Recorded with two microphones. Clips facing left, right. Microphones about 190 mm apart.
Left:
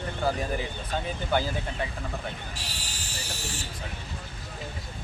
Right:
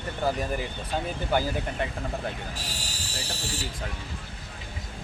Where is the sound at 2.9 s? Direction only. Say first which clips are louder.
Right 2 dB; 35° right (ahead or behind).